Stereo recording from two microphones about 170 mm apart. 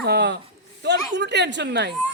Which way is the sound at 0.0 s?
75° right (ahead or behind).